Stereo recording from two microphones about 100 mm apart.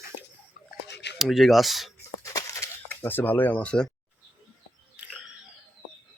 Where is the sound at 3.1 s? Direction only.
20° left (ahead or behind).